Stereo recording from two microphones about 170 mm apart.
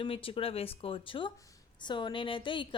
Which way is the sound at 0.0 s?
30° left (ahead or behind).